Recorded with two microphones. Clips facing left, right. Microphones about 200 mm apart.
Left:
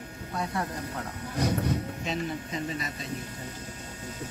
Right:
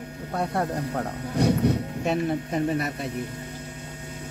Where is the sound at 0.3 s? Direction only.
60° right (ahead or behind).